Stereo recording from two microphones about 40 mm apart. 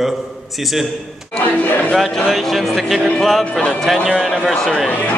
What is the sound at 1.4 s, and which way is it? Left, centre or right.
Speech, left.